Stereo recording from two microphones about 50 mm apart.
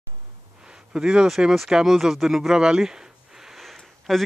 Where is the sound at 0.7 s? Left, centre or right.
Centre.